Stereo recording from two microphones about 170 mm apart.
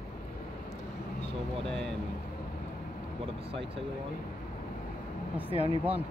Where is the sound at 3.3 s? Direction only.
35° right (ahead or behind).